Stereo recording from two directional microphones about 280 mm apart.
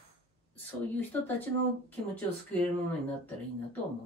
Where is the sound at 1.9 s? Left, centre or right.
Centre.